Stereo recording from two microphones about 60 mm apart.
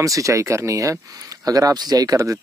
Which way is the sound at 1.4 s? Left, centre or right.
Right.